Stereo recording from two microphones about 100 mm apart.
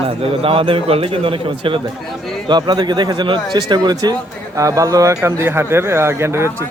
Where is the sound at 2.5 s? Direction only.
45° right (ahead or behind); by 6.5 s 25° right (ahead or behind).